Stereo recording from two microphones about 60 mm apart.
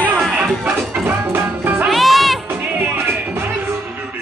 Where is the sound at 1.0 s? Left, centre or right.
Right.